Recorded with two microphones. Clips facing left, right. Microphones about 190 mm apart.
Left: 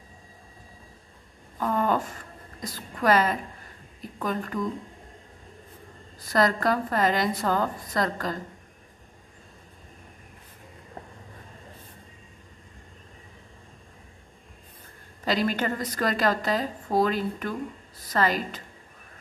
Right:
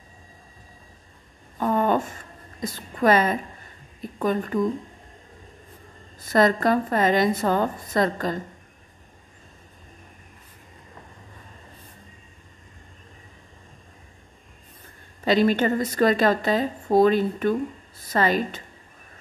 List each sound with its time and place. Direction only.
1.6 s a sound: 25° right (ahead or behind)
2.6 s speech: 25° right (ahead or behind)
6.3 s speech: 20° right (ahead or behind)
15.2 s speech: 25° right (ahead or behind)